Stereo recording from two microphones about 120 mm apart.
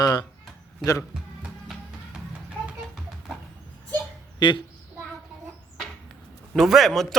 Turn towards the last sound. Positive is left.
turn(degrees=0)  # may be behind; listen again after turning